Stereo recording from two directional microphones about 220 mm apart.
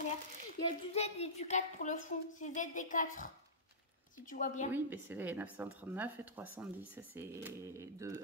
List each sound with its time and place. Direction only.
0.7 s speech: 30° left (ahead or behind)
4.3 s speech: 35° left (ahead or behind)
4.7 s speech: 10° right (ahead or behind)